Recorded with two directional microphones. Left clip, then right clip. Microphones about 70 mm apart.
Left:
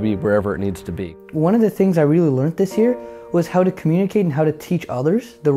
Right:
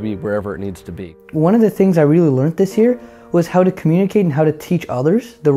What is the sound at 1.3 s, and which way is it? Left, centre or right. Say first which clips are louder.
Speech: right 3 dB; right.